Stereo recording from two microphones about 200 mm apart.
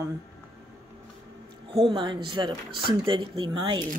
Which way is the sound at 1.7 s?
25° right (ahead or behind).